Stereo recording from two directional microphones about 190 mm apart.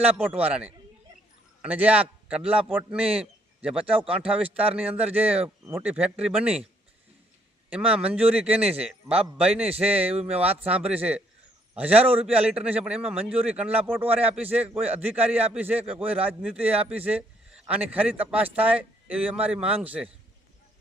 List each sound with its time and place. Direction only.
0.3 s a man's voice: 10° right (ahead or behind)
7.7 s speech: 5° right (ahead or behind)